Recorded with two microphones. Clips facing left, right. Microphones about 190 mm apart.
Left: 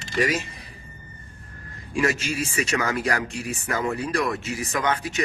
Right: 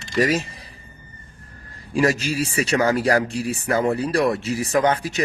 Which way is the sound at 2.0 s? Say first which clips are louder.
Right 4 dB; 35° right (ahead or behind).